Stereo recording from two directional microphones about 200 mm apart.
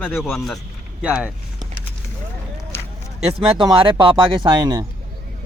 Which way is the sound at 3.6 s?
25° right (ahead or behind).